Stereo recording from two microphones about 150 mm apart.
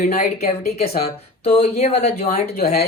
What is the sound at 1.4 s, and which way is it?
Speech, 40° left (ahead or behind).